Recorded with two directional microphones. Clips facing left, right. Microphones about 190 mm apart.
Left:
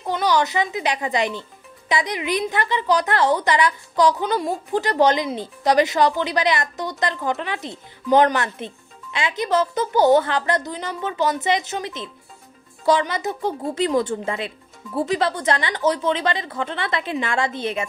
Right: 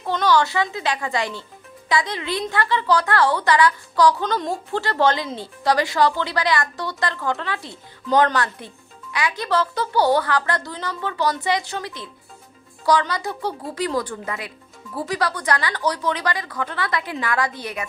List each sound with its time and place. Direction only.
0.0 s a woman's voice: 15° left (ahead or behind)